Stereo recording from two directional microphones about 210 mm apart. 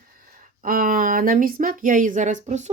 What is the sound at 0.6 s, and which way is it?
Speech, 40° right (ahead or behind).